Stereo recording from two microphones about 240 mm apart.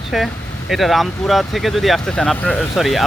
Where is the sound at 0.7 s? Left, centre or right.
Centre.